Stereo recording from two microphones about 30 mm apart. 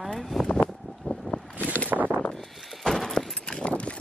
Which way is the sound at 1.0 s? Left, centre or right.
Left.